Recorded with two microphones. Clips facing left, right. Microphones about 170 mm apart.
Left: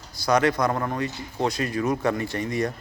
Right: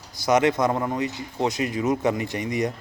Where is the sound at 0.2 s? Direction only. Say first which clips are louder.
Right 1 dB; 20° right (ahead or behind).